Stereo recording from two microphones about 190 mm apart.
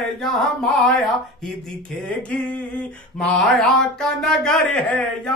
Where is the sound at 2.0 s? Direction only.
5° left (ahead or behind).